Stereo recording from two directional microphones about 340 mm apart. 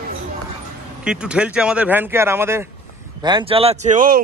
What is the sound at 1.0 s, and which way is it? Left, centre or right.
Speech, centre.